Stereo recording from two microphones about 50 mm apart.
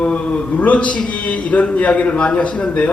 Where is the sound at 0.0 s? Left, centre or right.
Left.